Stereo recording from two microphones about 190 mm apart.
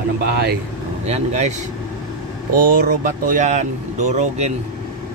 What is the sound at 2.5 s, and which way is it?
Speech, 45° right (ahead or behind).